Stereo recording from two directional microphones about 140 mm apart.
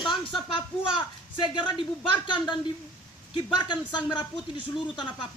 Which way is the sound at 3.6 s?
30° left (ahead or behind).